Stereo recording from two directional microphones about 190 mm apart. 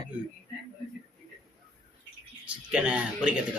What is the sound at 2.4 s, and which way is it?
Speech, 5° right (ahead or behind).